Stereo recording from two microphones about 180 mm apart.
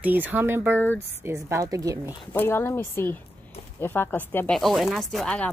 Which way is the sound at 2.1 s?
15° left (ahead or behind).